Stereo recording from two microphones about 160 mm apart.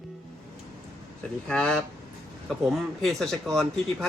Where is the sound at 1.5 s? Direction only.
5° left (ahead or behind).